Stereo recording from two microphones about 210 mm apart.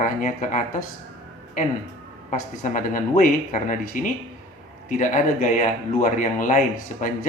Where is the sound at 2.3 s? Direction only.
40° left (ahead or behind).